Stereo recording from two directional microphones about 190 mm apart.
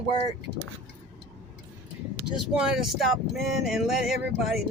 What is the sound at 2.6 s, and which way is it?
Speech, 5° right (ahead or behind).